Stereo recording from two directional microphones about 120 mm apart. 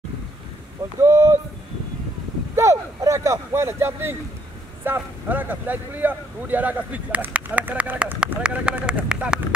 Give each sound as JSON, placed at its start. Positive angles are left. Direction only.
{"t": 1.0, "sound": "speech", "side_deg": -25}
{"t": 2.5, "sound": "speech", "side_deg": -25}